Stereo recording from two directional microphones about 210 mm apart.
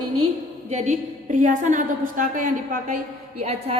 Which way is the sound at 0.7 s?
35° right (ahead or behind).